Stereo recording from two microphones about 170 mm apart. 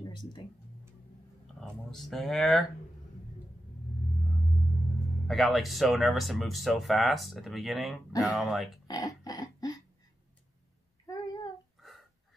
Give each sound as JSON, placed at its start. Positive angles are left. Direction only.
{"t": 1.6, "sound": "speech", "side_deg": 0}
{"t": 5.3, "sound": "speech", "side_deg": 0}
{"t": 8.8, "sound": "a sound", "side_deg": 20}